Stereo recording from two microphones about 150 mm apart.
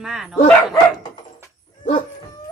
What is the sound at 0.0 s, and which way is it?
Speech, 5° right (ahead or behind).